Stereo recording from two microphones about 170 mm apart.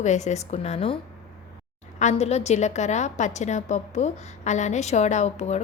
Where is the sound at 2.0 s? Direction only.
40° left (ahead or behind).